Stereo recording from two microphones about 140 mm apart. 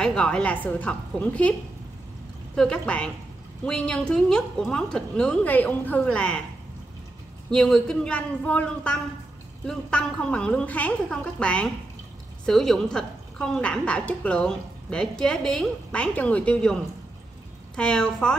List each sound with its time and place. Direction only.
0.0 s a woman's voice: 5° left (ahead or behind)
2.5 s a woman's voice: 5° left (ahead or behind)
7.5 s a woman's voice: 5° left (ahead or behind)
17.7 s a woman's voice: 5° left (ahead or behind)